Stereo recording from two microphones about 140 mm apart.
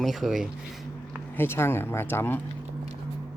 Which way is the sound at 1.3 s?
15° left (ahead or behind).